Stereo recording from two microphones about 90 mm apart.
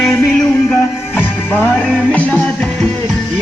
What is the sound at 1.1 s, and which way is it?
Music, 20° left (ahead or behind).